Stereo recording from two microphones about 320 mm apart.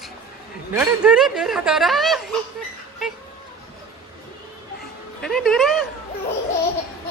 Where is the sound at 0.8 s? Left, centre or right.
Centre.